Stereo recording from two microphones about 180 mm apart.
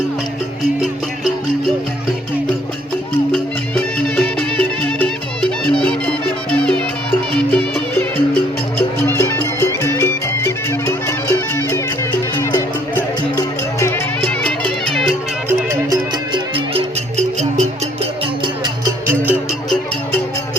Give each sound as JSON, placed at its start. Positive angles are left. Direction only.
{"t": 3.9, "sound": "music", "side_deg": 5}
{"t": 14.4, "sound": "music", "side_deg": 5}
{"t": 15.9, "sound": "music", "side_deg": -30}
{"t": 19.2, "sound": "music", "side_deg": 0}